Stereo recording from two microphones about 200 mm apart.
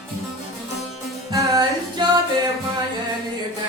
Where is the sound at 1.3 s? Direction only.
15° right (ahead or behind).